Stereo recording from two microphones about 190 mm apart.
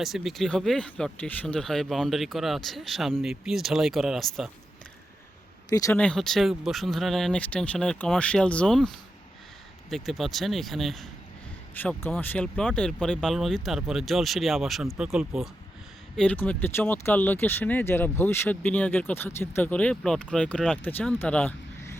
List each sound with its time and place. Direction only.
0.0 s speech: centre (ahead or behind)
5.6 s speech: 15° left (ahead or behind)
6.0 s speech: 5° left (ahead or behind)